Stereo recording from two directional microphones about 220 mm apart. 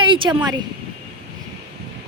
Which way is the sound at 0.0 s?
20° right (ahead or behind).